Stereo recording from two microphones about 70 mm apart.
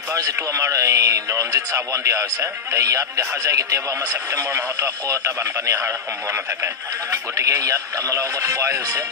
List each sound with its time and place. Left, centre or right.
0.4 s speech: right